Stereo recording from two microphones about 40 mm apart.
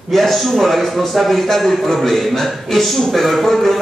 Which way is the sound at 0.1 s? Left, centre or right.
Centre.